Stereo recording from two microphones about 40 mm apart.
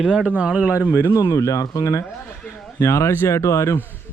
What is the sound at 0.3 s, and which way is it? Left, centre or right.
Speech, right.